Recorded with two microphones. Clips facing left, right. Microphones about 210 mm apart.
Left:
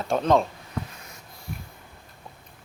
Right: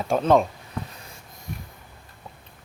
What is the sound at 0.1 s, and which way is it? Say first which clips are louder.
Speech: right 2 dB; 10° right (ahead or behind).